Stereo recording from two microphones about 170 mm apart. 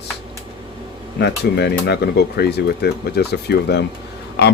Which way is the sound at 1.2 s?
80° left.